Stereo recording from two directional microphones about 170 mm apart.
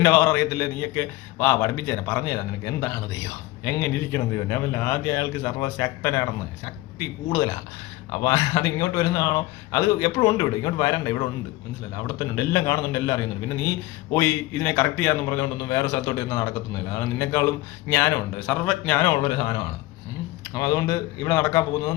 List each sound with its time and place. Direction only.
0.0 s a man's voice: 10° left (ahead or behind)